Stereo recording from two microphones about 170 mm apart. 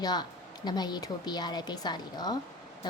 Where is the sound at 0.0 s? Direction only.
25° left (ahead or behind).